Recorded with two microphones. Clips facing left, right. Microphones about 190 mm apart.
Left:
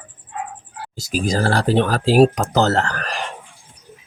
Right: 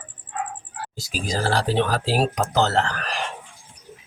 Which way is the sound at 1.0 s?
45° left (ahead or behind).